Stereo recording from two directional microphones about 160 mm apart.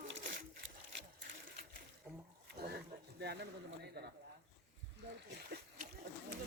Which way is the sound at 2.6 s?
90° right.